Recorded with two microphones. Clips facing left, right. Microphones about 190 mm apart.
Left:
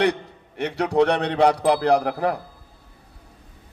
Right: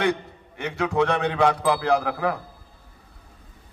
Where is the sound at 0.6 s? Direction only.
35° left (ahead or behind).